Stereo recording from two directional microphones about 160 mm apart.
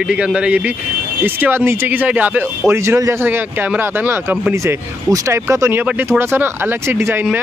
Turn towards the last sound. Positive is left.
turn(degrees=-15)  # may be behind; listen again after turning